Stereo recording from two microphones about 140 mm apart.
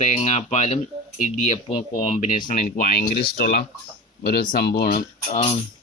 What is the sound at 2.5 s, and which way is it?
Speech, 80° left.